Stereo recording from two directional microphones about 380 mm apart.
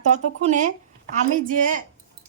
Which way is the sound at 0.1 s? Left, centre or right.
Centre.